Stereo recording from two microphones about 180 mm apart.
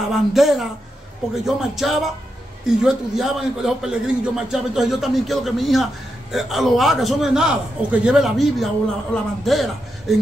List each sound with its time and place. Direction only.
0.1 s a man's voice: centre (ahead or behind)